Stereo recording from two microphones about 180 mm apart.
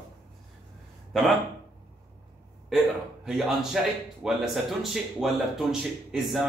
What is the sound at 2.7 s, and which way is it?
Speech, centre (ahead or behind).